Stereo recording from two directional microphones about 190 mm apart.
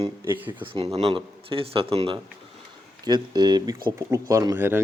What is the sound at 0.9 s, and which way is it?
A man's voice, 30° right (ahead or behind).